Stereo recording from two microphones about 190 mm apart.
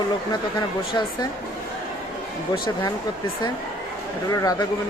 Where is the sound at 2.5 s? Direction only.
25° left (ahead or behind).